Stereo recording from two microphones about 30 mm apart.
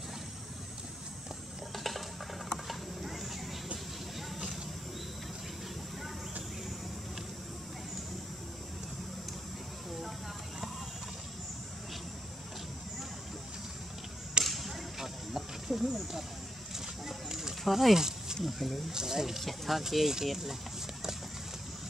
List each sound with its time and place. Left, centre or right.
1.8 s a sound: centre
14.4 s a sound: centre
14.7 s snake: centre
16.7 s a sound: centre
17.6 s speech: centre
17.9 s snake: centre
18.4 s speech: centre
18.9 s speech: centre
19.4 s speech: centre
19.9 s speech: centre